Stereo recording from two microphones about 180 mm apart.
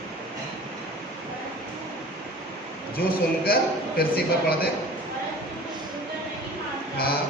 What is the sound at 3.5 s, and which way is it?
A man's voice, 55° left (ahead or behind).